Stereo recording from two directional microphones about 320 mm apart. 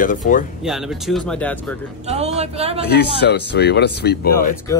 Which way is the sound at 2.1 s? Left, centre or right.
Centre.